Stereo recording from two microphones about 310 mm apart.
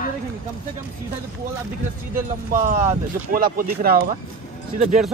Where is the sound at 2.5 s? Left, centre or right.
Right.